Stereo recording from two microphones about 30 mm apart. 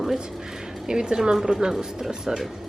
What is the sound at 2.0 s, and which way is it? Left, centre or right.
Speech, centre.